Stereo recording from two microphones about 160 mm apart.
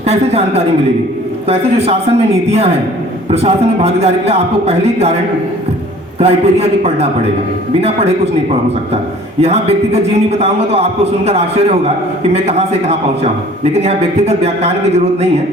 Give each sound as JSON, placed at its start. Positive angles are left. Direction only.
{"t": 0.1, "sound": "a man's voice", "side_deg": -40}
{"t": 6.1, "sound": "a man's voice", "side_deg": -40}
{"t": 9.4, "sound": "a man's voice", "side_deg": -40}